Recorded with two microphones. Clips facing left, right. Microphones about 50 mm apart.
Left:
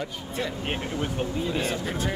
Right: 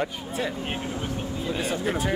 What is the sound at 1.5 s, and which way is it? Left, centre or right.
Speech, centre.